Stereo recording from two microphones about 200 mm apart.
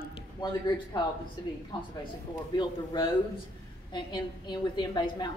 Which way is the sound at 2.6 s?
20° left (ahead or behind).